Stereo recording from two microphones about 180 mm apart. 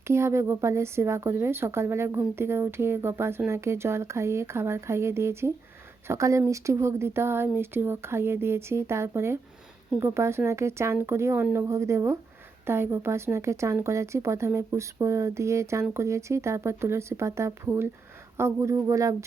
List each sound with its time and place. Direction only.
0.1 s a woman's voice: 15° right (ahead or behind)